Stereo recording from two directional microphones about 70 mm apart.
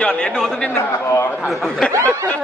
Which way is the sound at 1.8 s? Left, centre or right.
Centre.